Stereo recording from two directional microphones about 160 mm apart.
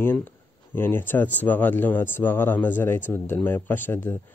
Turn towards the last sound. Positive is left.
turn(degrees=15)  # may be behind; listen again after turning